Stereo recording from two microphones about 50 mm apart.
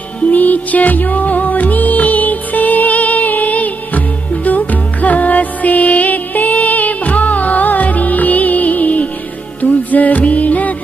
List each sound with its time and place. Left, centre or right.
0.2 s music: left